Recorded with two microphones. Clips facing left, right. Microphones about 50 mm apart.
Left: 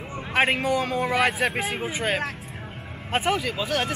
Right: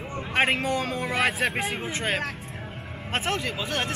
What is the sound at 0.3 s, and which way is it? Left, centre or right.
A man's voice, centre.